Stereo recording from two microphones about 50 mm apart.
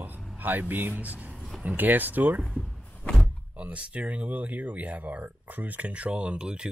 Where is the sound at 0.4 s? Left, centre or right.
Right.